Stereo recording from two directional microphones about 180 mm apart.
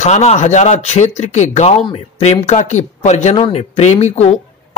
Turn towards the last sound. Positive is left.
turn(degrees=35)  # may be behind; listen again after turning